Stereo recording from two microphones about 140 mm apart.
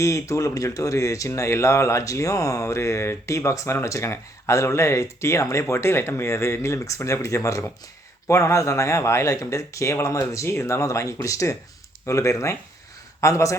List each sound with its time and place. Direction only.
0.0 s speech: 20° left (ahead or behind)